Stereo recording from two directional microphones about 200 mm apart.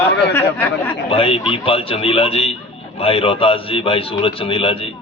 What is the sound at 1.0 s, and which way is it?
A man's voice, 25° left (ahead or behind).